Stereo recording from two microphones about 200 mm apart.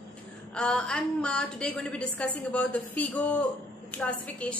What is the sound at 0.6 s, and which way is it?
A woman's voice, 5° left (ahead or behind).